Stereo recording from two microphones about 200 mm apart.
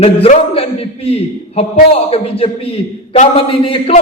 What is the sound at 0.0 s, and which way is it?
A man's voice, 30° left (ahead or behind).